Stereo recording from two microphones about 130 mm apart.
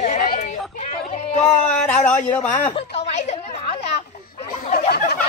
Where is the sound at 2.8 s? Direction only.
55° left (ahead or behind).